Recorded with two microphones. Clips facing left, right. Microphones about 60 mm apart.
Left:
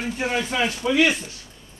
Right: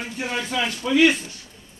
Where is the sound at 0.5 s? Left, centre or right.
Left.